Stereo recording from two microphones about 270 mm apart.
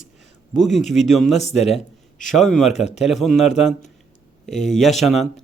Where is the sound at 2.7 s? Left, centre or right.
Left.